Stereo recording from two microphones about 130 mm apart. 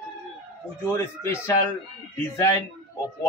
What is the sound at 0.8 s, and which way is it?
Speech, 20° left (ahead or behind).